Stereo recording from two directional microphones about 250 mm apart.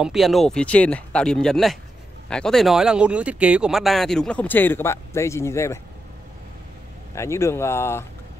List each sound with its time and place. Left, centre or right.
0.0 s speech: centre
7.2 s speech: centre